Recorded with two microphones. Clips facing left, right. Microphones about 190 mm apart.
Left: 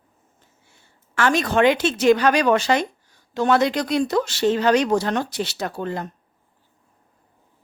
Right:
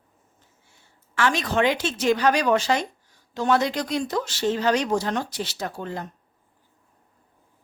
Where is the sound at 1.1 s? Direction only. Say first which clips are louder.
Left 4 dB; 50° left (ahead or behind); by 6.1 s 65° left (ahead or behind).